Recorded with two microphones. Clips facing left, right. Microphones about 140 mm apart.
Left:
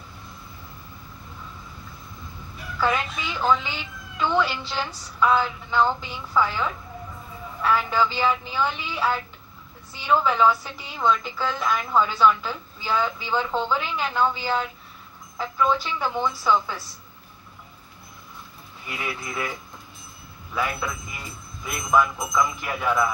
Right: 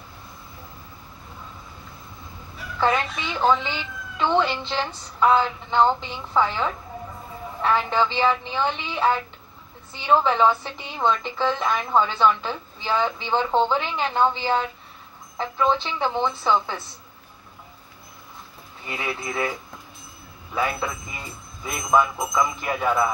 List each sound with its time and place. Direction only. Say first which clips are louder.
2.8 s a woman's voice: right 2 dB; 25° right (ahead or behind)
18.9 s a woman's voice: right 3 dB; 30° right (ahead or behind)
20.5 s a woman's voice: right 2 dB; 25° right (ahead or behind)